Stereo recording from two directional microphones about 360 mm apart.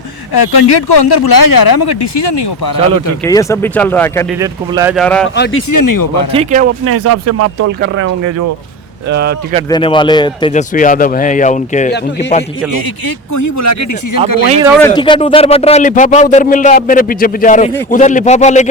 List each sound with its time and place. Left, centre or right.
0.3 s speech: left
3.2 s speech: centre
4.4 s speech: centre
5.7 s speech: left
6.3 s speech: centre
6.8 s speech: right
9.6 s speech: centre
13.3 s speech: left
14.4 s speech: centre
14.7 s speech: centre